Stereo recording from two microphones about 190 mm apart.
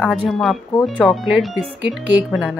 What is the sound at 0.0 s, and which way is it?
Speech, centre (ahead or behind).